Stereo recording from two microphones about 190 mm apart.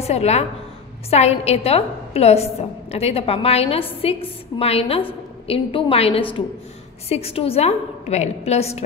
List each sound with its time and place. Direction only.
0.0 s a woman's voice: 35° left (ahead or behind)